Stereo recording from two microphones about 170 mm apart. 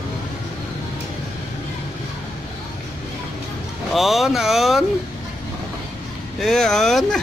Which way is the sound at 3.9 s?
Centre (ahead or behind).